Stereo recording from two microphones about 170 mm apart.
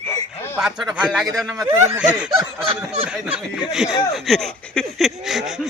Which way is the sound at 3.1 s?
5° right (ahead or behind).